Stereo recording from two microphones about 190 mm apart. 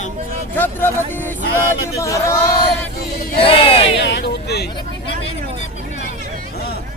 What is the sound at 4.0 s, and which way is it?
Speech, 65° left (ahead or behind).